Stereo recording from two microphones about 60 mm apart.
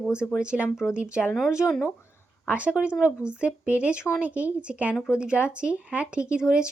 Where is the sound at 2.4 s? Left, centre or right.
Right.